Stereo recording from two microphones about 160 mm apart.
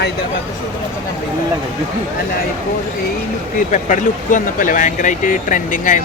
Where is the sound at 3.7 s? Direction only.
50° left (ahead or behind).